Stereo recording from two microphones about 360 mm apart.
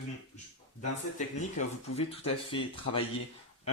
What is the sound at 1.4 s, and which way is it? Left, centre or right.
Speech, centre.